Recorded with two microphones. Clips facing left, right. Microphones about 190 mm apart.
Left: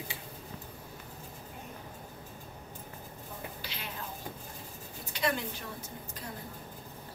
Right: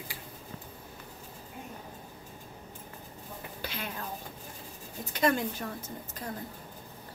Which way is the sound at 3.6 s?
50° right (ahead or behind).